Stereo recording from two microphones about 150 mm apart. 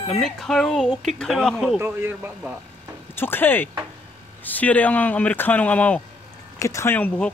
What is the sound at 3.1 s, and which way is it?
Speech, 15° left (ahead or behind).